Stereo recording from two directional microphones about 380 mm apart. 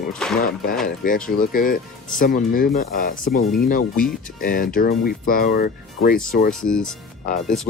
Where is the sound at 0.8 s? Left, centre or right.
Left.